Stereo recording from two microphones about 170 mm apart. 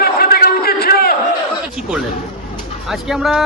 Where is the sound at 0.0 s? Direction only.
65° left (ahead or behind).